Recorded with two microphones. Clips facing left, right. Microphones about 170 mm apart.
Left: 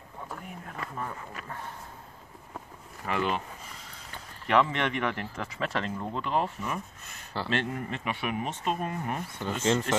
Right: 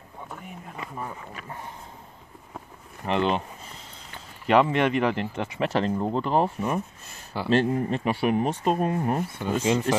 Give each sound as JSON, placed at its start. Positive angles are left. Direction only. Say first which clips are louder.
{"t": 0.7, "sound": "speech", "louder": "right 1 dB", "side_deg": -10}
{"t": 3.1, "sound": "speech", "louder": "right 5 dB", "side_deg": -25}
{"t": 4.5, "sound": "speech", "louder": "right 5 dB", "side_deg": -30}
{"t": 9.4, "sound": "speech", "louder": "right 1 dB", "side_deg": -10}